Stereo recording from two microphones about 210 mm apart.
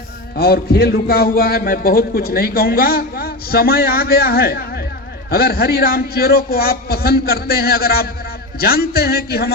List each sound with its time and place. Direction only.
0.3 s a man's voice: 45° left (ahead or behind)